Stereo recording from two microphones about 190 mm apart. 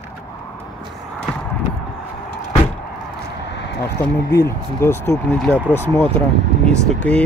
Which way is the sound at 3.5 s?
65° left (ahead or behind).